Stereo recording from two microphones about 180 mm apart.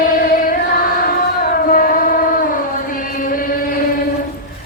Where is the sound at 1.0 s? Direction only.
55° left (ahead or behind).